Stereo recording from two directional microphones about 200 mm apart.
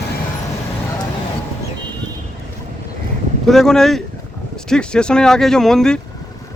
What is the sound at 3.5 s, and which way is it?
Speech, centre (ahead or behind).